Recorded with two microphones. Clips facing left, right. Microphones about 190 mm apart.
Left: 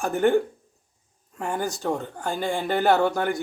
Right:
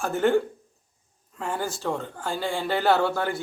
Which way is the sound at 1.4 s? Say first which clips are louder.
Left 2 dB; 15° left (ahead or behind).